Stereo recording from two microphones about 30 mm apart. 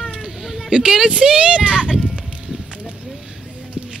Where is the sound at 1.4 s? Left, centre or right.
Right.